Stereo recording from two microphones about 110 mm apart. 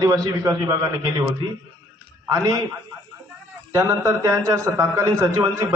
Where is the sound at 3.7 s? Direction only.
30° right (ahead or behind).